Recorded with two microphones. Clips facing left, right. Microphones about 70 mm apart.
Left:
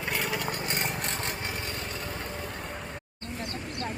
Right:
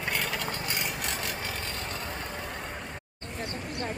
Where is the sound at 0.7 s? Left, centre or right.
Left.